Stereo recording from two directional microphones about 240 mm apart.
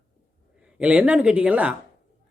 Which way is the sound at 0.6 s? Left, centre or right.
Centre.